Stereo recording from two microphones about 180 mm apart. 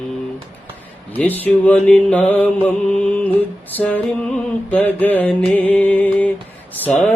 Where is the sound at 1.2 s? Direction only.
10° left (ahead or behind).